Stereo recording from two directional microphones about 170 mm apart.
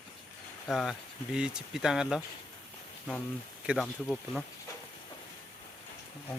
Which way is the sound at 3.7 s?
Centre (ahead or behind).